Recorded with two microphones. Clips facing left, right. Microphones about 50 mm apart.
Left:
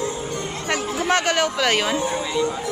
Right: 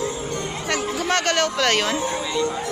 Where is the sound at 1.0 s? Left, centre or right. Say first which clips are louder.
Left 2 dB; centre.